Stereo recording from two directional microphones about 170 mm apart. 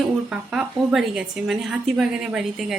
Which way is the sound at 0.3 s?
5° right (ahead or behind).